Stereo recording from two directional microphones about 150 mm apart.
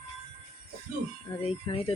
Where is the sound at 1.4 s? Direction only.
40° left (ahead or behind).